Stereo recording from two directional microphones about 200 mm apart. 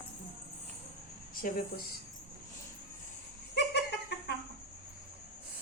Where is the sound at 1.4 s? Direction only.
45° left (ahead or behind).